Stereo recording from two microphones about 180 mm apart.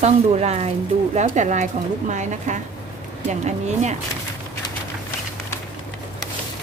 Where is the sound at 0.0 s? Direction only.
40° right (ahead or behind).